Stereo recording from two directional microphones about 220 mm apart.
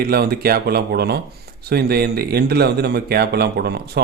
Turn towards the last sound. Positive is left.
turn(degrees=-45)  # may be behind; listen again after turning